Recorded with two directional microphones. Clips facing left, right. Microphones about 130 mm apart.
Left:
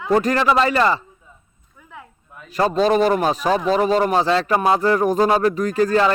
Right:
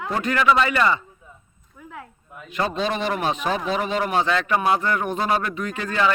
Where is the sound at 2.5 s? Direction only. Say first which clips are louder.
Left 7 dB; 40° left (ahead or behind).